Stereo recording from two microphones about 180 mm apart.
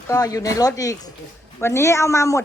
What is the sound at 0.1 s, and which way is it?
Speech, 20° left (ahead or behind).